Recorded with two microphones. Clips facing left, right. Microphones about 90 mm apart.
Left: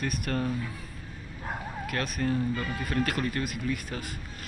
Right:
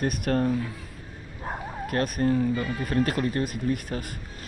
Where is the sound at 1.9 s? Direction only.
40° right (ahead or behind).